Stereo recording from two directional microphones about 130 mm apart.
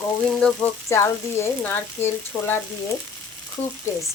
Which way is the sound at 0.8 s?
20° left (ahead or behind).